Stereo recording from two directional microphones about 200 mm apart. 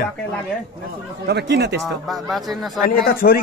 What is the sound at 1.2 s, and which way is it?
Speech, 60° right (ahead or behind).